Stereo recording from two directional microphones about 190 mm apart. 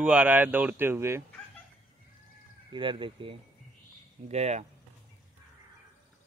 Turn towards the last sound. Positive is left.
turn(degrees=-35)  # may be behind; listen again after turning